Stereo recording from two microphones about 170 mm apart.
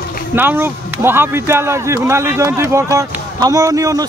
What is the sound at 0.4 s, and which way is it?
A man's voice, 15° right (ahead or behind).